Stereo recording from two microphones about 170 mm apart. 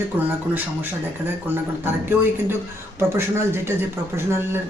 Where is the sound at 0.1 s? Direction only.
10° right (ahead or behind).